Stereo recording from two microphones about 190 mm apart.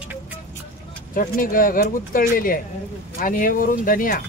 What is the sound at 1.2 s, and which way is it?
Speech, 45° left (ahead or behind).